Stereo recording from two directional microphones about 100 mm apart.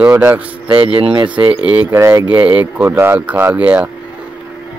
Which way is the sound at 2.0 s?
30° right (ahead or behind).